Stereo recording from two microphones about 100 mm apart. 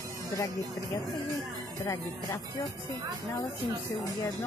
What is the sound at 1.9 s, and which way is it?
Speech, 30° left (ahead or behind).